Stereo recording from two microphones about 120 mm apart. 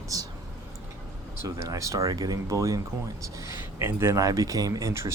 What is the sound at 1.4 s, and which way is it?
Speech, 25° right (ahead or behind).